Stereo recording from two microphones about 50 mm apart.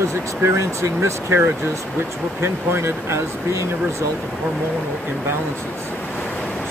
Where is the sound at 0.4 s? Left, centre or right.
Right.